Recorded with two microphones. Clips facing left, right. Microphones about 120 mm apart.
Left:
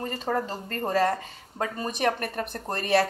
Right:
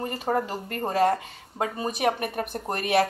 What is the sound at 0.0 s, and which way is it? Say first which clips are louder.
A woman's voice: right 2 dB; 15° right (ahead or behind).